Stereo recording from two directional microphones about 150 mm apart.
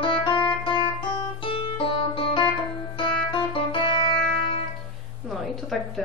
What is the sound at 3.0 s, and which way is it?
Music, 35° left (ahead or behind).